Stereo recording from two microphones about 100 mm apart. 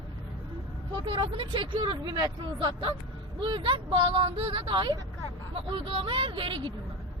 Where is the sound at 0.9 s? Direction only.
60° right (ahead or behind).